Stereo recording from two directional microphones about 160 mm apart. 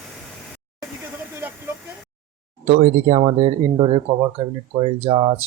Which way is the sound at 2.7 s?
45° right (ahead or behind).